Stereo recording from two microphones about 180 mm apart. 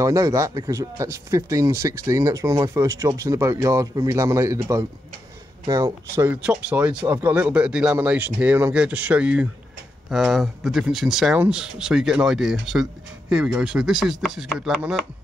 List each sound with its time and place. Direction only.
0.0 s speech: 20° right (ahead or behind); by 15.0 s centre (ahead or behind)